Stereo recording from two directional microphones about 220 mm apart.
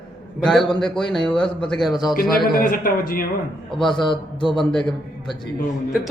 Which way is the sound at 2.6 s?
40° left (ahead or behind).